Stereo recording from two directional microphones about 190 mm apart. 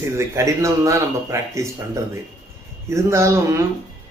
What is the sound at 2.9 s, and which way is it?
Speech, 15° right (ahead or behind).